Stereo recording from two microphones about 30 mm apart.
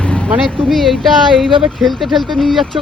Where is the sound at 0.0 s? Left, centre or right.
Left.